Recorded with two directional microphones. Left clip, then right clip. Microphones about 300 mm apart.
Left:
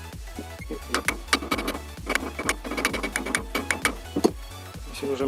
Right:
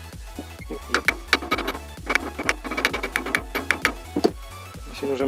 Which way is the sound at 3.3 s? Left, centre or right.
Centre.